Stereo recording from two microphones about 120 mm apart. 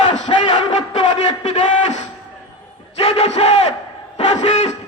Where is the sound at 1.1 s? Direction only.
65° left (ahead or behind).